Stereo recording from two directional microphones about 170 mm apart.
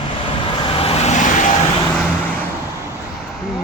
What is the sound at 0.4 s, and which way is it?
Vehicle, 30° left (ahead or behind).